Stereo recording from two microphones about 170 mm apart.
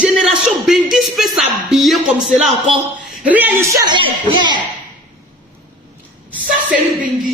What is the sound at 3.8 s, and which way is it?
Speech, 30° right (ahead or behind).